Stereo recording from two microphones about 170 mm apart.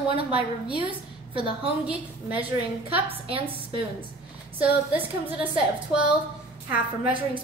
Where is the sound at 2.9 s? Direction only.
35° right (ahead or behind).